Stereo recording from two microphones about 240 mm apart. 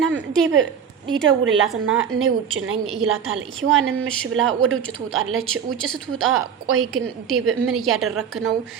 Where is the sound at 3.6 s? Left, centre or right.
Right.